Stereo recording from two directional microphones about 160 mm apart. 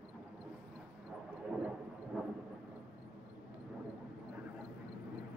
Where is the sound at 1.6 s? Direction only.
5° right (ahead or behind).